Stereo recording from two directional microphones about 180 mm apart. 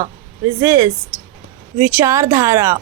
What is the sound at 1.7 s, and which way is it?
Speech, 15° right (ahead or behind).